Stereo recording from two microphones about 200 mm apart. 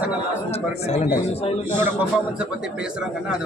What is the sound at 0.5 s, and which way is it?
Speech, 30° left (ahead or behind).